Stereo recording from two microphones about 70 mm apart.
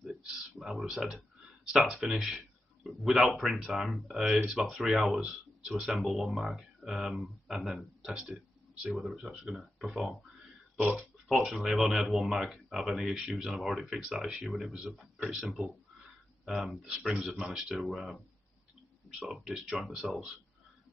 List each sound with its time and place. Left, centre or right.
0.0 s a sound: centre
1.6 s speech: centre
10.8 s speech: centre
11.2 s speech: centre
19.2 s speech: centre